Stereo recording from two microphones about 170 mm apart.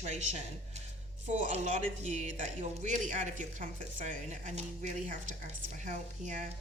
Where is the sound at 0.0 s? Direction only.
40° right (ahead or behind).